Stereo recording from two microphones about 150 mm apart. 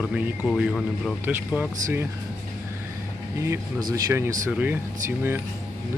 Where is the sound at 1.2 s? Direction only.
15° right (ahead or behind).